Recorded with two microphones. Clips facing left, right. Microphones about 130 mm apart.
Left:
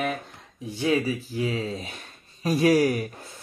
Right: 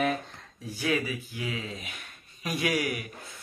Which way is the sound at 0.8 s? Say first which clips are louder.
Left 5 dB; 35° left (ahead or behind).